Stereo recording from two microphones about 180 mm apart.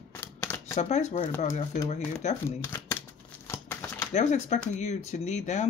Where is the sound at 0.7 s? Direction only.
40° left (ahead or behind).